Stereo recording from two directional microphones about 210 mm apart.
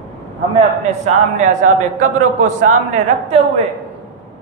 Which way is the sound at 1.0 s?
35° right (ahead or behind).